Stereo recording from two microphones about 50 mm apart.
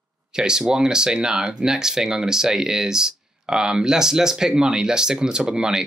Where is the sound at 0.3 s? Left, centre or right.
Centre.